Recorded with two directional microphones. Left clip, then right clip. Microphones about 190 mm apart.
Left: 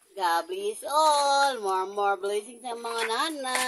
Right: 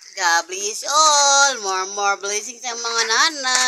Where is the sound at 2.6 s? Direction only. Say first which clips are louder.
Right 8 dB; 30° right (ahead or behind).